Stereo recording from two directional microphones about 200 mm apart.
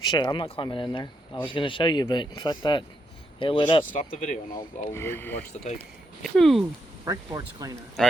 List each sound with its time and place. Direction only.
0.0 s speech: 20° left (ahead or behind)
3.9 s speech: 40° left (ahead or behind)
4.9 s speech: 10° left (ahead or behind)
7.0 s speech: 15° right (ahead or behind)
8.0 s speech: 5° left (ahead or behind)